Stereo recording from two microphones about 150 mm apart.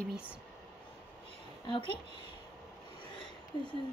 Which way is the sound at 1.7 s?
35° left (ahead or behind).